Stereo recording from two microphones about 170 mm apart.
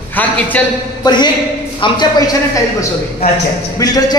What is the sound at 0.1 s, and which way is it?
Speech, 10° left (ahead or behind).